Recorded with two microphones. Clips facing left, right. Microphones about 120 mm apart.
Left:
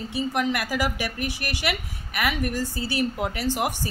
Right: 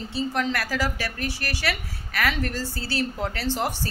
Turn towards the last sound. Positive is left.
turn(degrees=15)  # may be behind; listen again after turning